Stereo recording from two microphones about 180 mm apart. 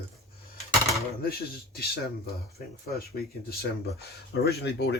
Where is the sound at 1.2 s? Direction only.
60° left (ahead or behind).